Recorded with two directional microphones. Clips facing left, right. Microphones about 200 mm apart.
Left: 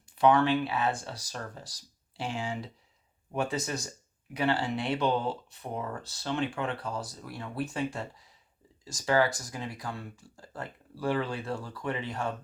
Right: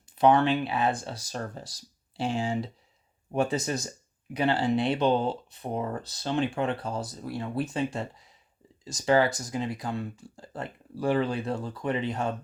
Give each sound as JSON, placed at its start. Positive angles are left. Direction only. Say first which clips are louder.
{"t": 0.3, "sound": "speech", "louder": "right 1 dB", "side_deg": -20}